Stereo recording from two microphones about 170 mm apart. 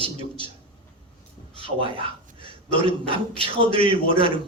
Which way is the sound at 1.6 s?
30° right (ahead or behind).